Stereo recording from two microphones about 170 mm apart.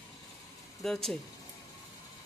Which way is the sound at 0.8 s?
Centre (ahead or behind).